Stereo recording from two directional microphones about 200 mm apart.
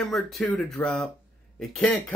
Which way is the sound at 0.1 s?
Centre (ahead or behind).